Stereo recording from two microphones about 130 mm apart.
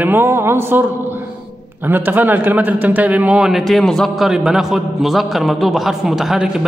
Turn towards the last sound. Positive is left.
turn(degrees=-5)  # may be behind; listen again after turning